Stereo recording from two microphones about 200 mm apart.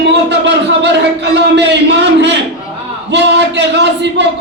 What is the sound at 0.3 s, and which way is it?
Music, 60° right (ahead or behind).